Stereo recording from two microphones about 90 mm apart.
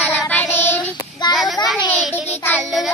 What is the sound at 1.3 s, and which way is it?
Speech, 50° left (ahead or behind).